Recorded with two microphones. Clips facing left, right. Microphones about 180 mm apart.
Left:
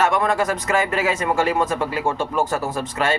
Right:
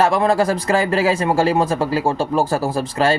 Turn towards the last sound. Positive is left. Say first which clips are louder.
# right 5 dB
turn(degrees=-30)  # may be behind; listen again after turning